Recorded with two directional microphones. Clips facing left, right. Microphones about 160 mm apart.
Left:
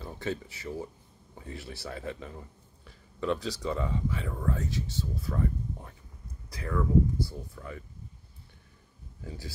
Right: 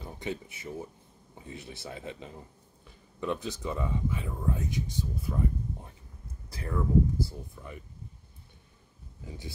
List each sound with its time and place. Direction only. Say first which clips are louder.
0.0 s speech: left 2 dB; 20° right (ahead or behind)
2.8 s a sound: left 2 dB; 20° right (ahead or behind)
3.6 s speech: even; 20° right (ahead or behind)